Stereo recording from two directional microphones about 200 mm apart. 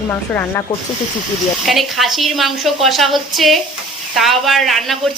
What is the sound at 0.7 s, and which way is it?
Speech, 20° left (ahead or behind).